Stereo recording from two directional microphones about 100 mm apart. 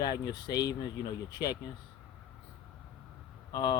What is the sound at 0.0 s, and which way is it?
Speech, 45° left (ahead or behind).